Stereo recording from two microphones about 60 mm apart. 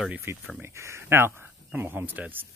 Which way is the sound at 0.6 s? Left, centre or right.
Right.